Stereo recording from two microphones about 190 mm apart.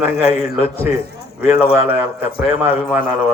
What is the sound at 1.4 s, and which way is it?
Speech, 10° right (ahead or behind).